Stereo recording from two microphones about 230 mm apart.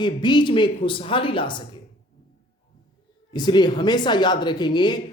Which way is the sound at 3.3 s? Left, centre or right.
Centre.